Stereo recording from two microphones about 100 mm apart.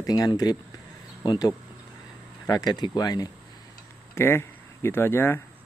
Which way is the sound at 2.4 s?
40° left (ahead or behind).